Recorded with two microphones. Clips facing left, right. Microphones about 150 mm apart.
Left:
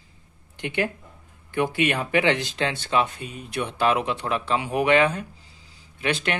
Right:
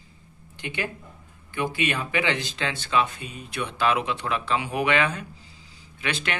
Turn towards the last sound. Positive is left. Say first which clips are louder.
# left 4 dB
turn(degrees=45)  # may be behind; listen again after turning